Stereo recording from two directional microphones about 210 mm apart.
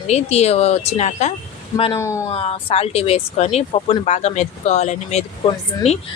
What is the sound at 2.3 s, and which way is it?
Speech, 30° left (ahead or behind).